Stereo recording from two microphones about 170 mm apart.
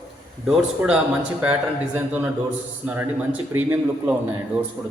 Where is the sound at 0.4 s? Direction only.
5° right (ahead or behind).